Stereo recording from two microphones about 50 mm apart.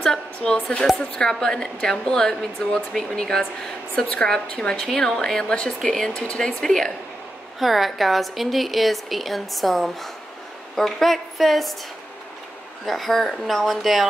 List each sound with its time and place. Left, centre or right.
0.0 s speech: centre
4.7 s speech: centre
7.5 s speech: centre
12.8 s speech: centre